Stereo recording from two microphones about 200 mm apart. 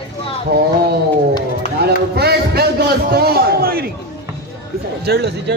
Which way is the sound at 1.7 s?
50° right (ahead or behind).